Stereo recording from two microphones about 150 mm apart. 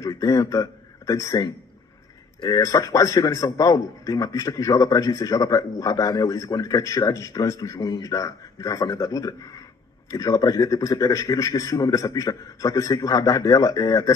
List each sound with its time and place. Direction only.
0.0 s a man's voice: 20° left (ahead or behind)